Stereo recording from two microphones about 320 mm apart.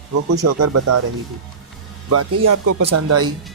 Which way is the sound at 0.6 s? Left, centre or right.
Right.